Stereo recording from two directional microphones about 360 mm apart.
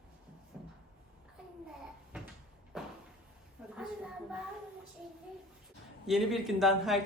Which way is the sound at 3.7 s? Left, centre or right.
Centre.